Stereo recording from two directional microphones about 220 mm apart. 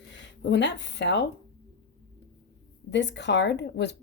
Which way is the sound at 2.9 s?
55° left (ahead or behind).